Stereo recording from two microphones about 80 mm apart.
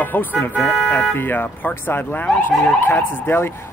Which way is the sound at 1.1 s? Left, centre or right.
Left.